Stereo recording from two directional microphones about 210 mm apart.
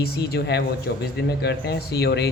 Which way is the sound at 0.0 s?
50° left (ahead or behind).